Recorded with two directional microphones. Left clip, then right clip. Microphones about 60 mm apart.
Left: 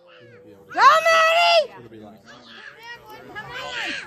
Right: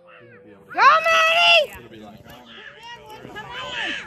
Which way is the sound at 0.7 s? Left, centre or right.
Left.